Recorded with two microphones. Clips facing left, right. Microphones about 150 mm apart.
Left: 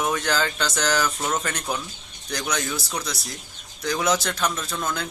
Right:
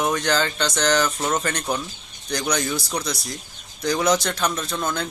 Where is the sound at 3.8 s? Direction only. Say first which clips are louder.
Right 3 dB; 5° left (ahead or behind).